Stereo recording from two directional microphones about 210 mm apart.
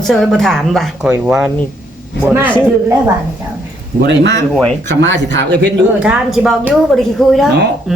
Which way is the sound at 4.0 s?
55° right (ahead or behind).